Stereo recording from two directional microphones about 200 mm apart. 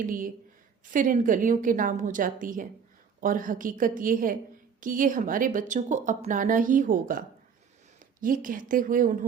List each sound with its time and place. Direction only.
0.0 s a woman's voice: 45° right (ahead or behind)